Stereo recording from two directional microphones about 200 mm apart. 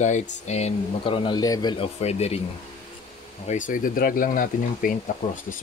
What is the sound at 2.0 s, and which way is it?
Speech, 30° left (ahead or behind).